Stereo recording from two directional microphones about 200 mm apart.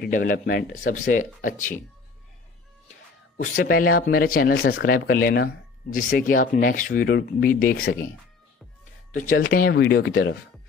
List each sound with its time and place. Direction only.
0.0 s speech: 45° left (ahead or behind)
3.5 s speech: 45° left (ahead or behind)
9.1 s speech: 40° left (ahead or behind); by 10.3 s 55° left (ahead or behind)